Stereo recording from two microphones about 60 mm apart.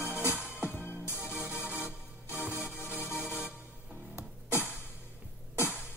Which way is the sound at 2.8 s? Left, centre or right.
Left.